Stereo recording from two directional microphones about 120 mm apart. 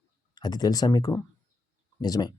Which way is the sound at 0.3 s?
35° left (ahead or behind).